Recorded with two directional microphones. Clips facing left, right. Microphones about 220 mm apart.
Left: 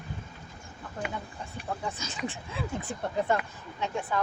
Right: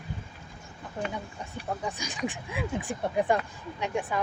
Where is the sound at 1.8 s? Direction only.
15° right (ahead or behind).